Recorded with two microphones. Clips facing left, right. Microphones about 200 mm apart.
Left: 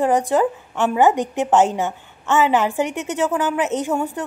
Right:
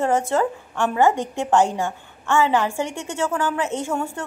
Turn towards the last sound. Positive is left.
turn(degrees=20)  # may be behind; listen again after turning